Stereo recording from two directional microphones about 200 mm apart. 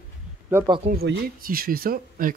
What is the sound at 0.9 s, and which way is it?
Speech, 55° right (ahead or behind).